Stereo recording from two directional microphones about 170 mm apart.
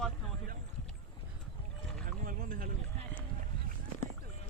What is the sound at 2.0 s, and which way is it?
Rowboat, 60° right (ahead or behind).